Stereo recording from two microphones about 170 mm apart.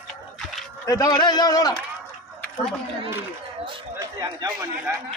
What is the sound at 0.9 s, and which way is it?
Speech, 25° left (ahead or behind).